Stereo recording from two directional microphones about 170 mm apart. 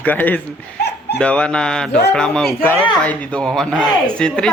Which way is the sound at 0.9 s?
85° left.